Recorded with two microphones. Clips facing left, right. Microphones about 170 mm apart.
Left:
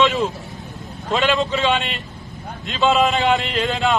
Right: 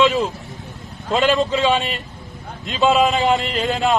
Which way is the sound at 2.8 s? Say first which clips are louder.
Right 1 dB; 5° right (ahead or behind).